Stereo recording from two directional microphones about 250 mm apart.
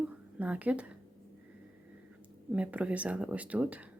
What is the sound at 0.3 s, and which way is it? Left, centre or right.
Speech, centre.